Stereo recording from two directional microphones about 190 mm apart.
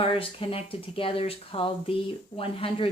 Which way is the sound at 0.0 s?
30° left (ahead or behind).